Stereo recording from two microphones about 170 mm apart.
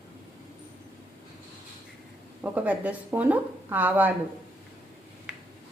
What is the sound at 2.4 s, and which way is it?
A woman's voice, 10° right (ahead or behind).